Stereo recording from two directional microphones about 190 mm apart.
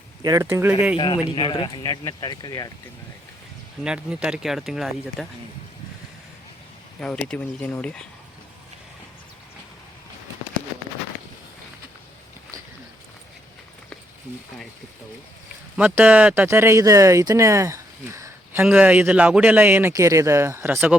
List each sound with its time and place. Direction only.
0.2 s speech: 15° right (ahead or behind)
0.9 s speech: 25° left (ahead or behind)
3.8 s speech: 5° right (ahead or behind)
7.0 s speech: 5° left (ahead or behind)
15.8 s speech: 5° right (ahead or behind)